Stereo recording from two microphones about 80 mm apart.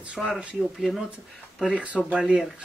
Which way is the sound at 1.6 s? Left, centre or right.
Centre.